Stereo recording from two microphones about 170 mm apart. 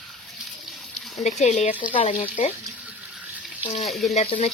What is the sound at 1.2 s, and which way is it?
Speech, 40° left (ahead or behind).